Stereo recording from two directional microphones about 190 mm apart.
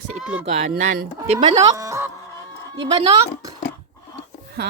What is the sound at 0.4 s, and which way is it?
Speech, 35° right (ahead or behind).